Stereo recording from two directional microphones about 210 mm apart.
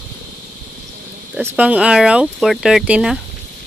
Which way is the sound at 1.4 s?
5° right (ahead or behind).